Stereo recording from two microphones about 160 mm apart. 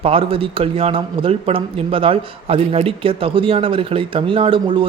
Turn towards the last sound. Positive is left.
turn(degrees=-30)  # may be behind; listen again after turning